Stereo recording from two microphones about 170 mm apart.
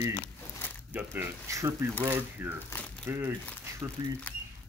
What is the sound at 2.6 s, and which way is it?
Speech, 10° left (ahead or behind).